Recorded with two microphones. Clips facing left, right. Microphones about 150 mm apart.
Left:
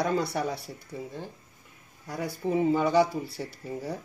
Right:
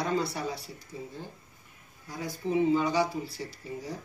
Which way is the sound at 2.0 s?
70° left (ahead or behind).